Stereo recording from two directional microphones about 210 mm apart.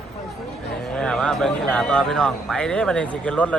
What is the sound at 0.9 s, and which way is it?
A man's voice, 5° left (ahead or behind).